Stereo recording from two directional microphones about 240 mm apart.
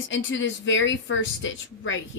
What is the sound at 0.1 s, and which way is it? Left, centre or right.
Speech, left.